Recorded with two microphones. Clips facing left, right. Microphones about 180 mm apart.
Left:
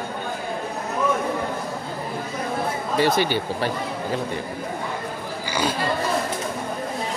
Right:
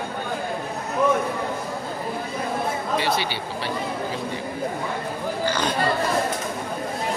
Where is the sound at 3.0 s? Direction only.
45° left (ahead or behind).